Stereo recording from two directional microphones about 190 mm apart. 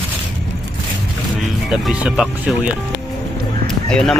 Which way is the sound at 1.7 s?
5° right (ahead or behind).